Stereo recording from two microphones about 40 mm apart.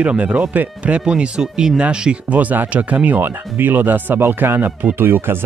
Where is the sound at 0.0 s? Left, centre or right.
Right.